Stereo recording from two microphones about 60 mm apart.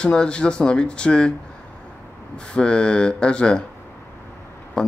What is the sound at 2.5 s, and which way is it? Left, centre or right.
Speech, centre.